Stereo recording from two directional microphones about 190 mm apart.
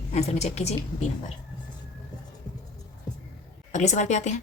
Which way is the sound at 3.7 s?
40° left (ahead or behind).